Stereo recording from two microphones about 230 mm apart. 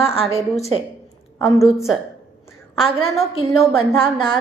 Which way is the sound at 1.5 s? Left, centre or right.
Centre.